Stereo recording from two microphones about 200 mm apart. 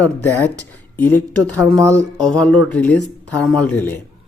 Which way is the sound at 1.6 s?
15° right (ahead or behind).